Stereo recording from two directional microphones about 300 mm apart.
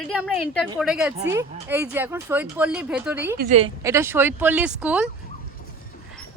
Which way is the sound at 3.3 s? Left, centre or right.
Right.